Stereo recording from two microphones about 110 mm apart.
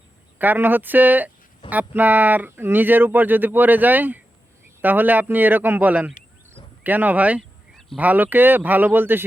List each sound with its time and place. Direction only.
0.3 s speech: 15° right (ahead or behind)
7.7 s a sound: 5° left (ahead or behind)
7.9 s speech: 15° right (ahead or behind)